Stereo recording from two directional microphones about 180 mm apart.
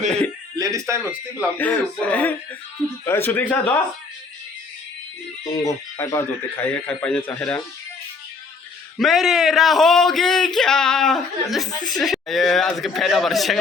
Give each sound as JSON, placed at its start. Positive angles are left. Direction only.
{"t": 0.5, "sound": "speech", "side_deg": -20}
{"t": 1.5, "sound": "speech", "side_deg": 10}
{"t": 5.6, "sound": "speech", "side_deg": 15}
{"t": 9.0, "sound": "speech", "side_deg": 0}